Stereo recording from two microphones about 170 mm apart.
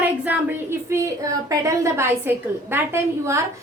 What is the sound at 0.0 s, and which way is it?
A woman's voice, 10° right (ahead or behind).